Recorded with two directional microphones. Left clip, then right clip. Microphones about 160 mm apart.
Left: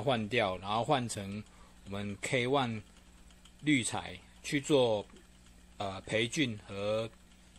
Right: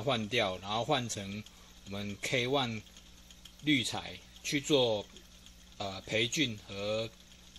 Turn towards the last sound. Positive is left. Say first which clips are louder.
# left 1 dB
turn(degrees=10)  # may be behind; listen again after turning